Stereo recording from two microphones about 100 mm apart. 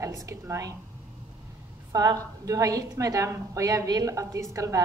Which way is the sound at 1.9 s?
40° right (ahead or behind).